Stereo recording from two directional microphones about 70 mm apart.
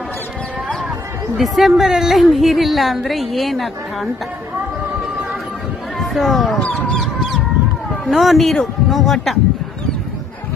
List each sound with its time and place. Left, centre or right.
1.4 s a woman's voice: centre
6.0 s speech: centre
6.6 s speech: centre
6.9 s goose: centre
8.0 s a woman's voice: centre